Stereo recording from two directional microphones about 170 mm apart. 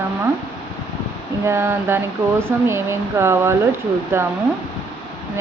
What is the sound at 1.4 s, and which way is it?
Speech, 15° right (ahead or behind).